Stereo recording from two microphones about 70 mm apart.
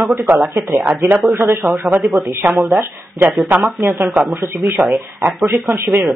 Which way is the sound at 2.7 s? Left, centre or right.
Right.